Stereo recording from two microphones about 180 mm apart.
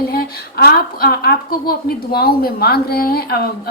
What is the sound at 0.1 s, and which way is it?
A woman's voice, 60° left (ahead or behind).